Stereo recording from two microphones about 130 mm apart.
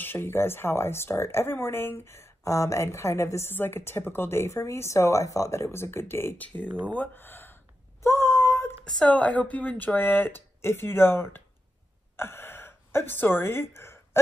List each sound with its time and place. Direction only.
0.0 s speech: 15° left (ahead or behind)
6.9 s a sound: 15° left (ahead or behind)
8.8 s speech: 5° left (ahead or behind)
12.2 s gasp: 20° left (ahead or behind)